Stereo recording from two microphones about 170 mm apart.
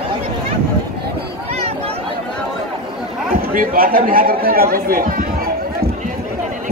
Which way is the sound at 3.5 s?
55° right (ahead or behind).